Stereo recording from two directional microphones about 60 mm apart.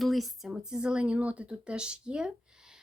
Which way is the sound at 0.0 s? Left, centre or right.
Centre.